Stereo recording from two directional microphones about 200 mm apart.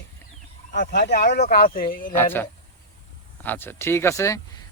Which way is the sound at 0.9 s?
55° left (ahead or behind).